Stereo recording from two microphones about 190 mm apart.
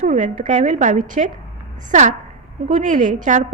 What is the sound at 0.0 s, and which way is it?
A woman's voice, 40° right (ahead or behind).